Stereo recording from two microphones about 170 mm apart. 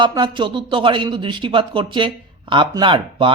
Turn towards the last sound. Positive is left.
turn(degrees=-30)  # may be behind; listen again after turning